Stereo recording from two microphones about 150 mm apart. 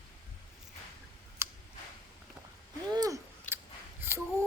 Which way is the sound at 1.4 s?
20° right (ahead or behind).